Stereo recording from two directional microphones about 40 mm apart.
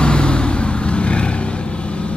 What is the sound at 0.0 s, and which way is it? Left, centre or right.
Vehicle, left.